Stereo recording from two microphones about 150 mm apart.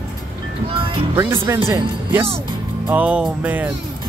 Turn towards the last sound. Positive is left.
turn(degrees=-10)  # may be behind; listen again after turning